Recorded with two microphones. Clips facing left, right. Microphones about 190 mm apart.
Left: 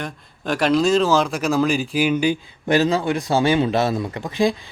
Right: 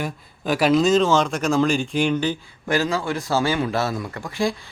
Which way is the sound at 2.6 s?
20° left (ahead or behind).